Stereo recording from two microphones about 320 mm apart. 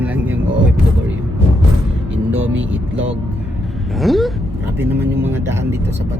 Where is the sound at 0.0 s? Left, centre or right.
Centre.